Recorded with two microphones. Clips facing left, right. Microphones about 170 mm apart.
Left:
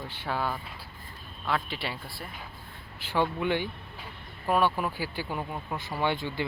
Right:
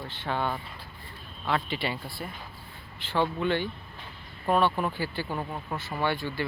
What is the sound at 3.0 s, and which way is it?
Speech, 10° left (ahead or behind).